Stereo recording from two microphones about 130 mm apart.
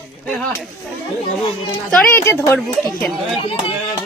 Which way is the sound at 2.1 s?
20° left (ahead or behind).